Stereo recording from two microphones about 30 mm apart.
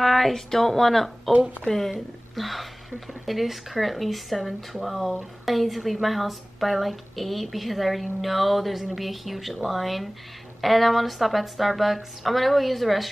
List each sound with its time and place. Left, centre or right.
0.0 s speech: centre
1.3 s speech: right
1.7 s a woman's voice: centre